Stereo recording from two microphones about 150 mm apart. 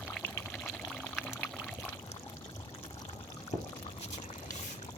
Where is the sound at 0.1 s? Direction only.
10° left (ahead or behind).